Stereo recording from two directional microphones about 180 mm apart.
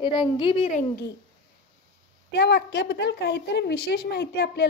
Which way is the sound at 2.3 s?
70° left (ahead or behind).